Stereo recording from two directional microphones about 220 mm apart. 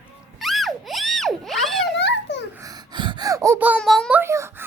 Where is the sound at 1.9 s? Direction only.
50° left (ahead or behind).